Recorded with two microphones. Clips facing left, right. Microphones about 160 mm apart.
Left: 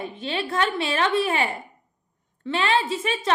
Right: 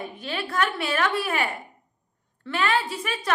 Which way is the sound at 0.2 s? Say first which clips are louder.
Left 2 dB; 25° left (ahead or behind).